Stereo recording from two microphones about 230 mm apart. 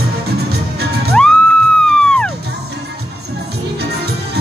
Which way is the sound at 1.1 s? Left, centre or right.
Centre.